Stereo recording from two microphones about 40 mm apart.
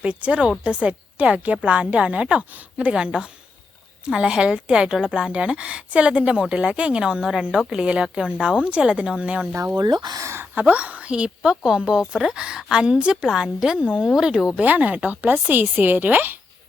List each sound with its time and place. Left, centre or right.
0.0 s a woman's voice: right
7.0 s a woman's voice: centre; by 11.1 s right
11.1 s a woman's voice: right
14.6 s speech: right